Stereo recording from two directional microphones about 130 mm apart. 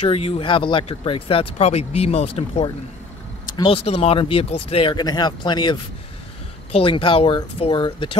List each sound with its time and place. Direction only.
0.0 s speech: 50° left (ahead or behind)
3.4 s vehicle: 30° left (ahead or behind)
3.7 s speech: 50° left (ahead or behind)
4.9 s speech: 30° left (ahead or behind)